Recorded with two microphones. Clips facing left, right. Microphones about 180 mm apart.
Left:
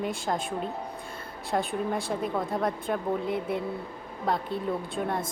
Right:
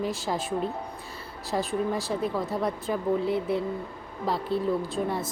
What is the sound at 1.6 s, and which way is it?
Speech, centre (ahead or behind).